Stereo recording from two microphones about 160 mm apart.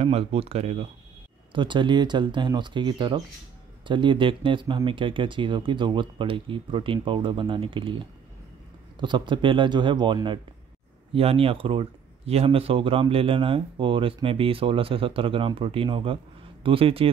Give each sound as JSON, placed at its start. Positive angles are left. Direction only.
{"t": 0.0, "sound": "speech", "side_deg": -40}